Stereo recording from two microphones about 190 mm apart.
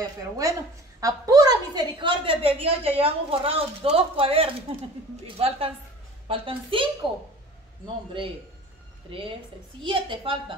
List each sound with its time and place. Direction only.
1.0 s a woman's voice: 20° right (ahead or behind)